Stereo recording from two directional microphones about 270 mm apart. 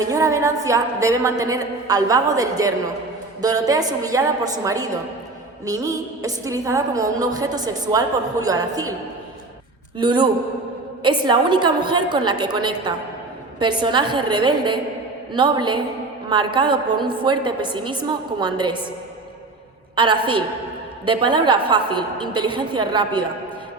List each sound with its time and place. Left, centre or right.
0.0 s a woman's voice: centre
10.0 s a woman's voice: centre
20.0 s a woman's voice: centre